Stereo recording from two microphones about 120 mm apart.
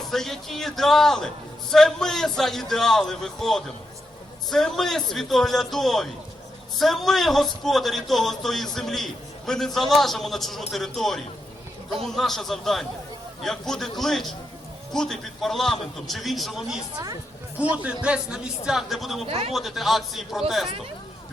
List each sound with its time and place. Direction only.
0.1 s a man's voice: centre (ahead or behind)
19.2 s speech: 55° right (ahead or behind)
19.5 s a man's voice: centre (ahead or behind)